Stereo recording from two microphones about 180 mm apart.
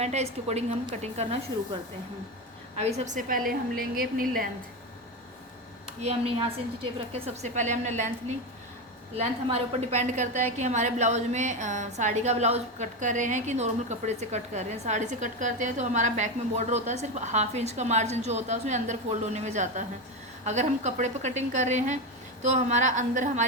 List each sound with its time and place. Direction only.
0.0 s a woman's voice: 35° right (ahead or behind)
2.7 s a woman's voice: 40° right (ahead or behind); by 4.3 s 55° right (ahead or behind)
6.0 s a woman's voice: 35° right (ahead or behind)
9.1 s a woman's voice: 35° right (ahead or behind)